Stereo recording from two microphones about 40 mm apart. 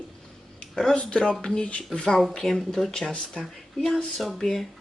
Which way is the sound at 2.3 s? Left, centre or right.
Centre.